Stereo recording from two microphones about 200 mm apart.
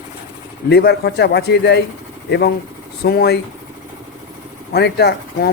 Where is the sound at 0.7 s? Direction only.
55° left (ahead or behind).